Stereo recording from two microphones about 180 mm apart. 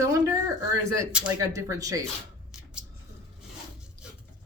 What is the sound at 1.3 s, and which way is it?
Speech, 20° right (ahead or behind).